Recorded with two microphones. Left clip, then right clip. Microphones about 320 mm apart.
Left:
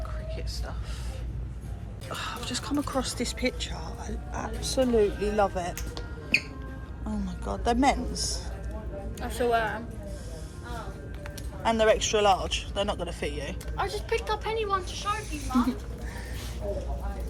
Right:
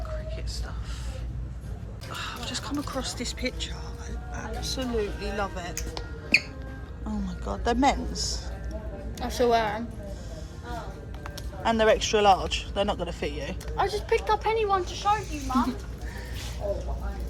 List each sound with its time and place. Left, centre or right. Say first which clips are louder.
2.0 s speech: even; centre
7.3 s speech: even; centre
8.1 s a woman's voice: right 1 dB; right
11.6 s a man's voice: right 1 dB; centre
13.7 s speech: right 4 dB; right